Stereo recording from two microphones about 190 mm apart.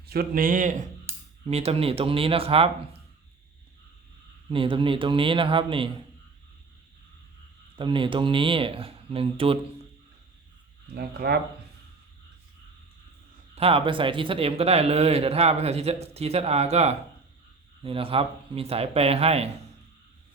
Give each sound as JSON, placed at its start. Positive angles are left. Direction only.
{"t": 0.1, "sound": "a man's voice", "side_deg": -50}
{"t": 4.4, "sound": "speech", "side_deg": -25}
{"t": 7.8, "sound": "speech", "side_deg": -25}
{"t": 10.9, "sound": "speech", "side_deg": -55}
{"t": 13.6, "sound": "a man's voice", "side_deg": -30}